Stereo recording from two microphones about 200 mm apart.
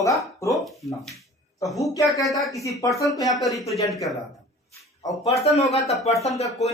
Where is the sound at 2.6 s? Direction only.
15° left (ahead or behind).